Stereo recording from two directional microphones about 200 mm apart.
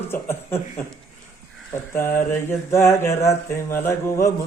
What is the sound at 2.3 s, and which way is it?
Speech, 15° left (ahead or behind).